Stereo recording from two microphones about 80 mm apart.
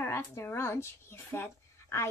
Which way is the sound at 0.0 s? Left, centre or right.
Left.